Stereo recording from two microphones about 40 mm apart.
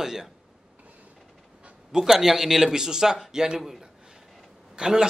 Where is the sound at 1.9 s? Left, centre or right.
Centre.